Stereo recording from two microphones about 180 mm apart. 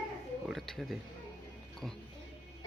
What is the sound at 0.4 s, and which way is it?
Speech, centre (ahead or behind).